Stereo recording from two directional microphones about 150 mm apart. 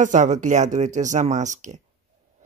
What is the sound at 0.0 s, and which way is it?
Speech, 55° right (ahead or behind).